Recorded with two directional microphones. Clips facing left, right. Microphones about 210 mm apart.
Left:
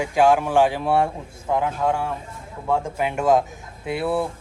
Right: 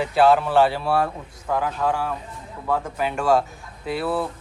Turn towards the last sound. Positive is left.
turn(degrees=20)  # may be behind; listen again after turning